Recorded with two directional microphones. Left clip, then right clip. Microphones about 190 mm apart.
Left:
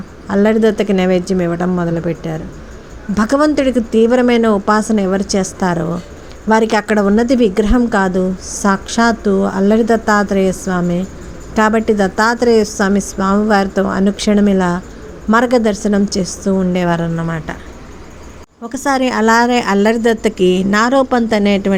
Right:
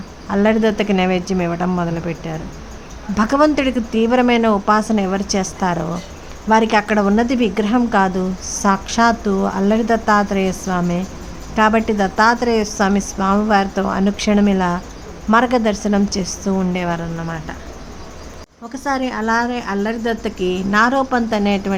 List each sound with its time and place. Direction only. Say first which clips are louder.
0.3 s a woman's voice: left 3 dB; 10° left (ahead or behind)
16.8 s speech: left 6 dB; 25° left (ahead or behind)
18.7 s speech: left 6 dB; 35° left (ahead or behind)